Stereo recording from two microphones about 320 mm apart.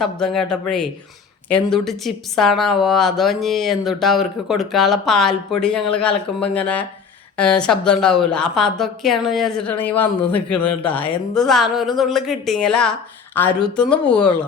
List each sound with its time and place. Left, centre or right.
0.0 s speech: centre